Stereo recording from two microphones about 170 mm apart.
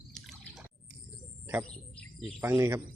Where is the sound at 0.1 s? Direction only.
Centre (ahead or behind).